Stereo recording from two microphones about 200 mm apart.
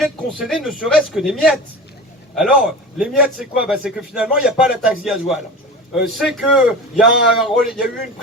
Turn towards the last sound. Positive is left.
turn(degrees=0)  # may be behind; listen again after turning